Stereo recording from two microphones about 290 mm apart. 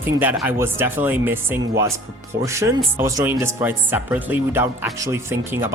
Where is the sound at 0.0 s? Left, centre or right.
Centre.